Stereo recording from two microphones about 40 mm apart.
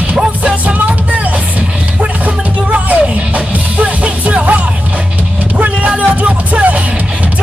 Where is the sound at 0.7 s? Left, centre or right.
Right.